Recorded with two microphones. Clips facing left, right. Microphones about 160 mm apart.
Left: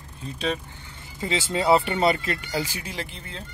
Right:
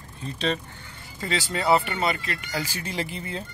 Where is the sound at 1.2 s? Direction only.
20° left (ahead or behind).